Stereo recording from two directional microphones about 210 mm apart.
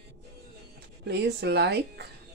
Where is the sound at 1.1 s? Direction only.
50° right (ahead or behind).